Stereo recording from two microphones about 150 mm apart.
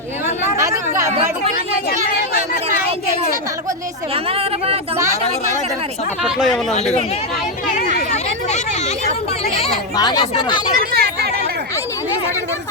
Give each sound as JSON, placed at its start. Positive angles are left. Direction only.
{"t": 0.3, "sound": "chatter", "side_deg": -20}
{"t": 4.1, "sound": "speech", "side_deg": -40}
{"t": 8.1, "sound": "speech", "side_deg": 50}
{"t": 9.9, "sound": "speech", "side_deg": 25}
{"t": 10.8, "sound": "chatter", "side_deg": -90}